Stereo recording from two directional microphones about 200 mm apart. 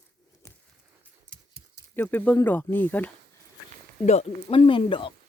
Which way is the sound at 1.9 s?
10° left (ahead or behind).